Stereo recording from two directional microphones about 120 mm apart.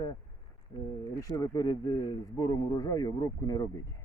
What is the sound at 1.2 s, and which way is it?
Speech, 30° left (ahead or behind).